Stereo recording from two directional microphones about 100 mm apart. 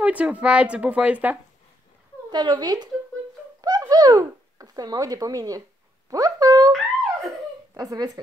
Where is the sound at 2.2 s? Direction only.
45° right (ahead or behind).